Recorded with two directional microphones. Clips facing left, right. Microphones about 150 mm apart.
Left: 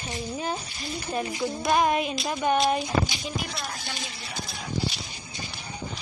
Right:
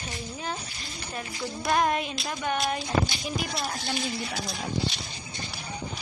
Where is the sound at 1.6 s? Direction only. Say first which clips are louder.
Left 2 dB; 10° left (ahead or behind).